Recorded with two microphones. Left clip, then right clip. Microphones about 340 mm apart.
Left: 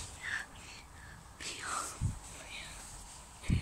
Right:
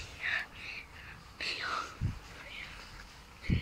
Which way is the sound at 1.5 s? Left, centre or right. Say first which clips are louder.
Right 5 dB; centre.